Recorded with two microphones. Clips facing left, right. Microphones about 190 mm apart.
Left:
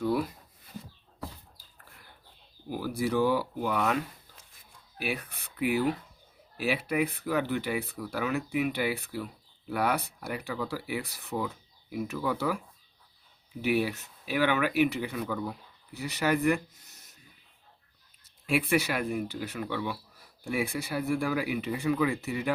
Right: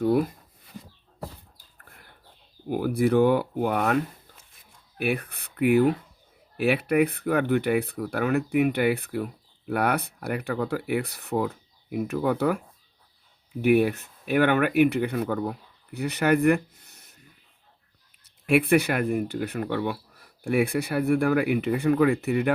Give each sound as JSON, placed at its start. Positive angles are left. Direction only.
{"t": 0.0, "sound": "speech", "side_deg": -50}
{"t": 1.5, "sound": "a sound", "side_deg": -55}
{"t": 2.6, "sound": "speech", "side_deg": -55}
{"t": 18.4, "sound": "speech", "side_deg": -60}